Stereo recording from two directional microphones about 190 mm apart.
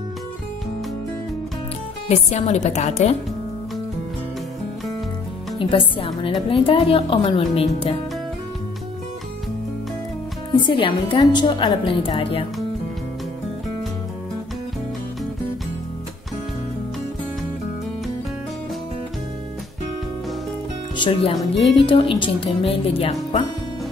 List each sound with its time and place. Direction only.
2.0 s a woman's voice: 35° left (ahead or behind)
5.6 s a woman's voice: 25° left (ahead or behind)
10.6 s a woman's voice: 25° left (ahead or behind)
20.9 s a woman's voice: 25° left (ahead or behind)